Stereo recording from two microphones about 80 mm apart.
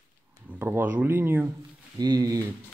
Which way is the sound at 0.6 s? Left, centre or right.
Right.